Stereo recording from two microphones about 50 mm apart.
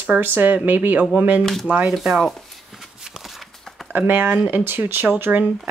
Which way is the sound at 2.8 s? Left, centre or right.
Centre.